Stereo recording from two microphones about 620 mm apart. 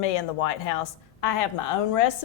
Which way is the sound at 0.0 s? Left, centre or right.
Left.